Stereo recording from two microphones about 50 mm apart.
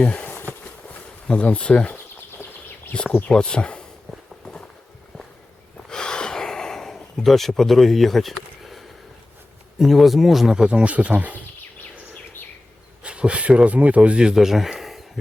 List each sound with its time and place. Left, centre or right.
0.1 s bee: left
1.3 s speech: left
5.9 s gasp: centre
9.7 s speech: centre; by 11.3 s right
13.0 s speech: right
14.2 s speech: centre